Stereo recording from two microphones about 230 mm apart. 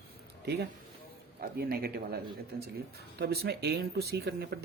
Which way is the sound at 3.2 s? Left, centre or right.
Right.